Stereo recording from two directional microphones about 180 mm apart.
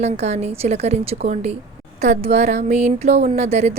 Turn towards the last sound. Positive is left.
turn(degrees=-35)  # may be behind; listen again after turning